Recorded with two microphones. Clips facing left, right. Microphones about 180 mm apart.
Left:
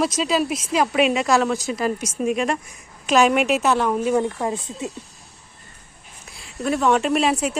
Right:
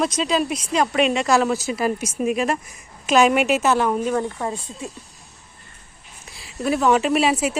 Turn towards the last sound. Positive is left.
turn(degrees=-5)  # may be behind; listen again after turning